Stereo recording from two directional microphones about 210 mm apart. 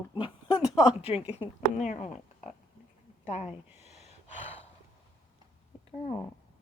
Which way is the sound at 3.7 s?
30° left (ahead or behind).